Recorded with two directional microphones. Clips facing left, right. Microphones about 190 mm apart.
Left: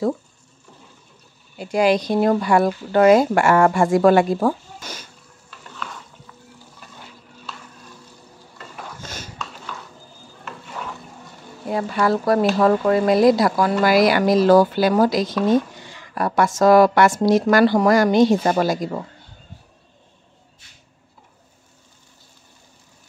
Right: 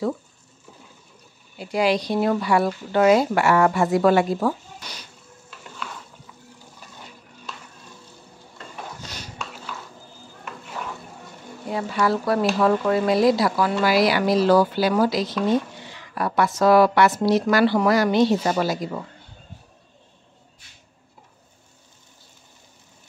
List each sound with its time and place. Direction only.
1.6 s speech: 45° left (ahead or behind)
11.7 s speech: 45° left (ahead or behind)